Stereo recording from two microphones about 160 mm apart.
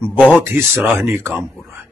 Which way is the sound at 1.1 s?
15° right (ahead or behind).